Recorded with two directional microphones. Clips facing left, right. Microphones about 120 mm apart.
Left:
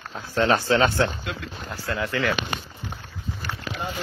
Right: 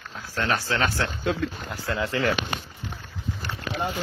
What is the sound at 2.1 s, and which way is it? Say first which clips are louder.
Speech: even; 35° right (ahead or behind).